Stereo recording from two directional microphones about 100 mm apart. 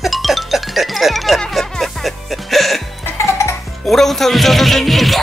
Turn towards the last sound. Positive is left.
turn(degrees=0)  # may be behind; listen again after turning